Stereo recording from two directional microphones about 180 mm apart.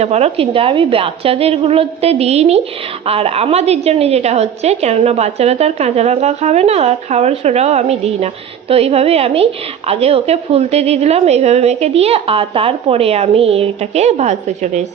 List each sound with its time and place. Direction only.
0.0 s a woman's voice: 35° right (ahead or behind)